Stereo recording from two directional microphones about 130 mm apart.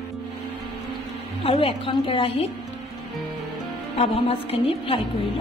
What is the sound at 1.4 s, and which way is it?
A woman's voice, 45° left (ahead or behind).